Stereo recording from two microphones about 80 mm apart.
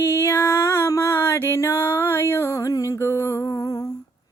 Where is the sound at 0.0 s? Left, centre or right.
Left.